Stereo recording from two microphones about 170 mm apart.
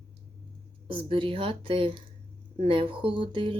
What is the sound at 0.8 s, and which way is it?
Speech, 30° right (ahead or behind).